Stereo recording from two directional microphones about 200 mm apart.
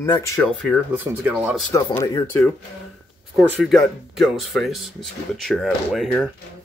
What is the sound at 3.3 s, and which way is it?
Speech, centre (ahead or behind).